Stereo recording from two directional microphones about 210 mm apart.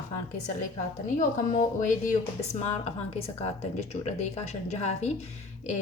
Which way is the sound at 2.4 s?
30° left (ahead or behind).